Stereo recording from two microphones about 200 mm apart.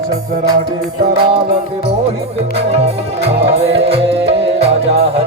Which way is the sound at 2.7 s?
30° right (ahead or behind).